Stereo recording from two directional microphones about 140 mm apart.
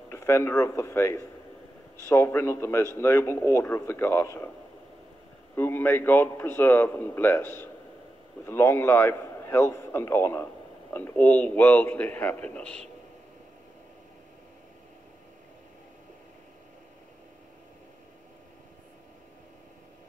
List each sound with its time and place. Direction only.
0.1 s a man's voice: 20° left (ahead or behind)
5.6 s a man's voice: 15° left (ahead or behind)